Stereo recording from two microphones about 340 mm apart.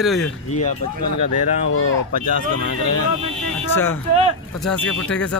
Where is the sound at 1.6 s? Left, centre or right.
Left.